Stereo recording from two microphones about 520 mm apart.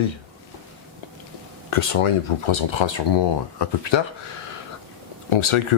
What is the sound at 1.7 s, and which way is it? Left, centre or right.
Speech, left.